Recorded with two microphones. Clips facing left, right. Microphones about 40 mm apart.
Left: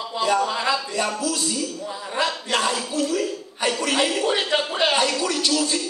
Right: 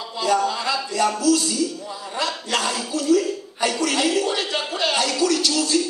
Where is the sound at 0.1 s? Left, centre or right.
Left.